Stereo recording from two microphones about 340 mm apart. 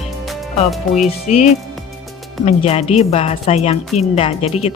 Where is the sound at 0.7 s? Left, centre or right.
Centre.